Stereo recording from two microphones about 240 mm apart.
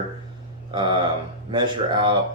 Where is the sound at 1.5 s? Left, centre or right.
Centre.